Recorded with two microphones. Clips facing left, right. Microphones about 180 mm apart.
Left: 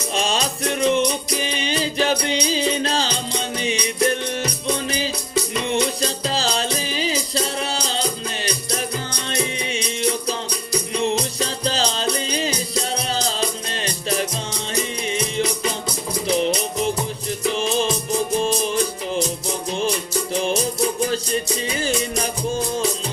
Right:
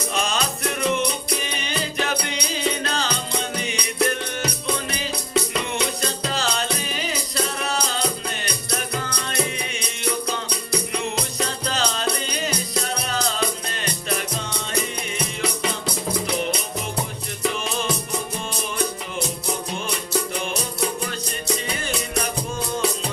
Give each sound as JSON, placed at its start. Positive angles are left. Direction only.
{"t": 0.1, "sound": "music", "side_deg": 30}
{"t": 5.6, "sound": "music", "side_deg": 30}
{"t": 11.0, "sound": "music", "side_deg": 30}
{"t": 18.4, "sound": "music", "side_deg": 35}